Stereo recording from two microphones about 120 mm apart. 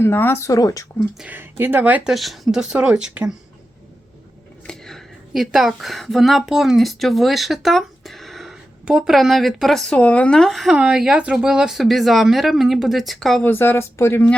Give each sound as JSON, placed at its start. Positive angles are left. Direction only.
{"t": 0.0, "sound": "speech", "side_deg": 20}
{"t": 0.9, "sound": "speech", "side_deg": -10}
{"t": 2.1, "sound": "speech", "side_deg": 0}
{"t": 4.6, "sound": "a woman's voice", "side_deg": 5}
{"t": 13.4, "sound": "speech", "side_deg": 15}